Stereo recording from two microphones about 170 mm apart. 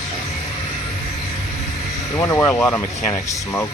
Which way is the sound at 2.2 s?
15° left (ahead or behind).